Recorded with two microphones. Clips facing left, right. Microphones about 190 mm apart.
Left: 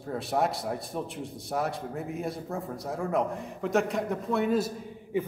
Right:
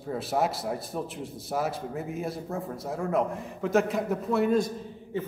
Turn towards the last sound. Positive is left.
turn(degrees=10)  # may be behind; listen again after turning